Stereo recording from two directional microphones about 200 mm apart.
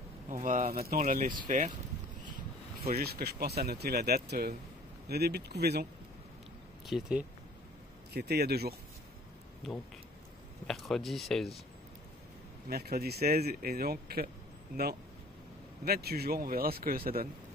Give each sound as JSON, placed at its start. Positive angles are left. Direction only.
{"t": 0.3, "sound": "speech", "side_deg": -40}
{"t": 3.0, "sound": "speech", "side_deg": -50}
{"t": 6.9, "sound": "speech", "side_deg": -5}
{"t": 8.1, "sound": "speech", "side_deg": -50}
{"t": 9.6, "sound": "speech", "side_deg": 0}
{"t": 12.6, "sound": "speech", "side_deg": -50}
{"t": 15.8, "sound": "speech", "side_deg": -50}